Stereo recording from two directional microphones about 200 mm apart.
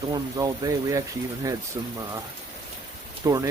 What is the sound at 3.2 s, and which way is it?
Speech, 15° right (ahead or behind).